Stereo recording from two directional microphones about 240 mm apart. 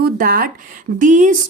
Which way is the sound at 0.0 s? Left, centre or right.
Right.